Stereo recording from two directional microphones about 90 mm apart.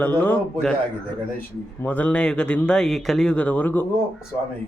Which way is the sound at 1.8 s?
20° left (ahead or behind).